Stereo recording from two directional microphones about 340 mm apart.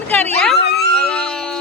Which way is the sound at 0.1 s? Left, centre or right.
Centre.